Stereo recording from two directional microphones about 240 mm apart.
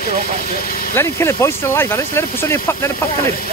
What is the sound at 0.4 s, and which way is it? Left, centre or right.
Speech, left.